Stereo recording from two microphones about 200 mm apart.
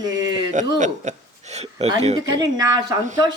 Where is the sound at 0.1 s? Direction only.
20° right (ahead or behind).